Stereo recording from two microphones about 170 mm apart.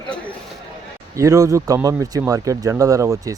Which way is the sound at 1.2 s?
20° right (ahead or behind).